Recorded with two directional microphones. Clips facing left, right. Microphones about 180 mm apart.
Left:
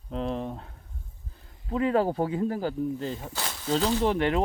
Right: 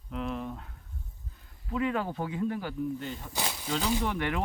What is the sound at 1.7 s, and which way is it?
Speech, 35° left (ahead or behind).